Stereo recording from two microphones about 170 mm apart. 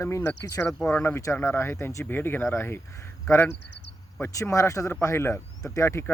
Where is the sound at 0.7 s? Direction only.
5° left (ahead or behind).